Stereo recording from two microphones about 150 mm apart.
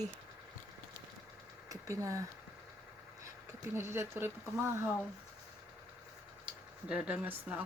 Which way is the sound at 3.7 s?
15° right (ahead or behind).